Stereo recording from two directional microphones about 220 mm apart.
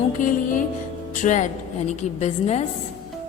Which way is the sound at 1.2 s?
35° left (ahead or behind).